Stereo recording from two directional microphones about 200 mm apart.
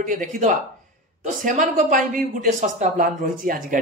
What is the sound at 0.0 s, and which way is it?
Speech, 40° right (ahead or behind).